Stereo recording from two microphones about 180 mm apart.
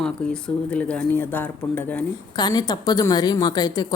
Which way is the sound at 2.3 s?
20° left (ahead or behind).